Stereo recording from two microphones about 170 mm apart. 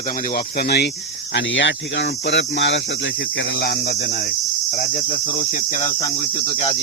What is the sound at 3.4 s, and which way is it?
Cricket, 70° left (ahead or behind).